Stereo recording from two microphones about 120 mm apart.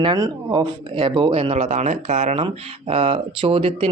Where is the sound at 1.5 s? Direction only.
75° right (ahead or behind).